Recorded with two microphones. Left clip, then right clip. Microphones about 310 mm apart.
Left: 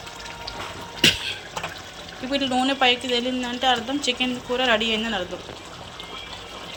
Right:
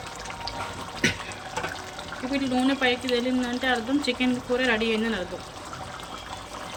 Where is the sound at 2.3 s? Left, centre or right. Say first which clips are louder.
Left 4 dB; centre.